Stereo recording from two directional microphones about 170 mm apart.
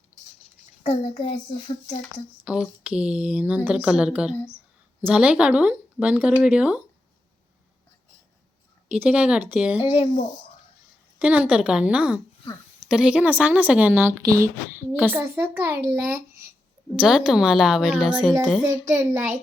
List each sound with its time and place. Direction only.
0.8 s child singing: 40° left (ahead or behind)
2.4 s speech: 10° right (ahead or behind)
8.9 s speech: 5° right (ahead or behind)
9.8 s child singing: 35° left (ahead or behind)
11.2 s a woman's voice: 5° right (ahead or behind)